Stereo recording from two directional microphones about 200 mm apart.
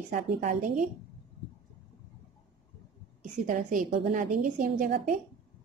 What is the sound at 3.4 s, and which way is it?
A woman's voice, 40° right (ahead or behind).